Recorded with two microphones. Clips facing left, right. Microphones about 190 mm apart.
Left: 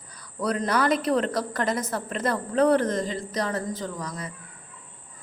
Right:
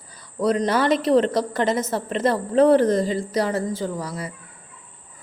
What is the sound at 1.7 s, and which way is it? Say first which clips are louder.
A woman's voice: right 5 dB; 25° right (ahead or behind).